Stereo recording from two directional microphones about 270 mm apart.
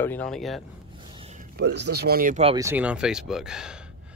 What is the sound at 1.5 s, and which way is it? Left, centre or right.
Speech, right.